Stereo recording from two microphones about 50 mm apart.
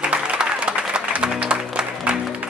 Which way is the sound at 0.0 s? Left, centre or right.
Right.